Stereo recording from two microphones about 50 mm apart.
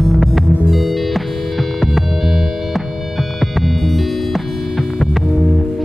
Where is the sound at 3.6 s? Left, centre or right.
Centre.